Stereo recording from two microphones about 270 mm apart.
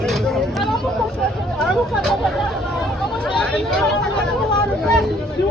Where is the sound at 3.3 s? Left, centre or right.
Centre.